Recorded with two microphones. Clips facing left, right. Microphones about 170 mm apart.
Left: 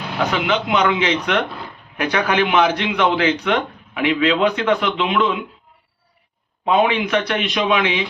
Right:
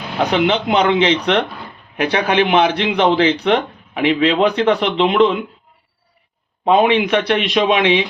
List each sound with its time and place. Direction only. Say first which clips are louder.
0.3 s a man's voice: right 5 dB; 30° right (ahead or behind)
6.7 s a man's voice: right 4 dB; 30° right (ahead or behind)